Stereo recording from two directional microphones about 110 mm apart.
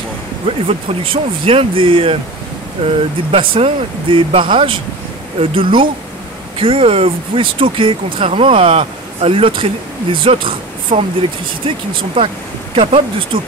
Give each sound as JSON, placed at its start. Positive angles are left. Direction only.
{"t": 0.5, "sound": "speech", "side_deg": -60}
{"t": 3.3, "sound": "speech", "side_deg": -55}